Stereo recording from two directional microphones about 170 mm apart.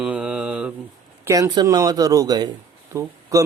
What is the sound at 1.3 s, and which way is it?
Speech, 20° right (ahead or behind).